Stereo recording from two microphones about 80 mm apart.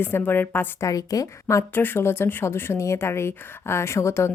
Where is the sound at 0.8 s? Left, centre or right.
Left.